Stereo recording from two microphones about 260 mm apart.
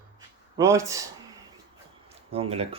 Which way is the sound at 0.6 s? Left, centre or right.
Centre.